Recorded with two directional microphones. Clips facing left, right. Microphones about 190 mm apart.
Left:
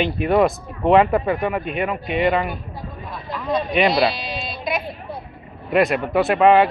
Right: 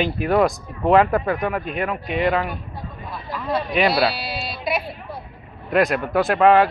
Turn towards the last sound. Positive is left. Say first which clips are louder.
# left 1 dB
turn(degrees=0)  # may be behind; listen again after turning